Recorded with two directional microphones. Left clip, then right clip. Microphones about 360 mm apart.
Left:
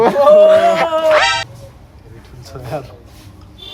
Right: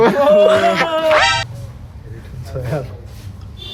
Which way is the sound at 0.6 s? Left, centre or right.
Left.